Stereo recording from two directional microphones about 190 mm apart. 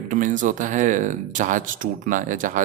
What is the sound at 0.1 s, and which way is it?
Speech, 40° right (ahead or behind).